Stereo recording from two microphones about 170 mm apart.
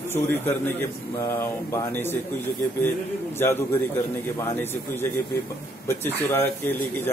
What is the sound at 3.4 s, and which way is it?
Speech, 15° left (ahead or behind).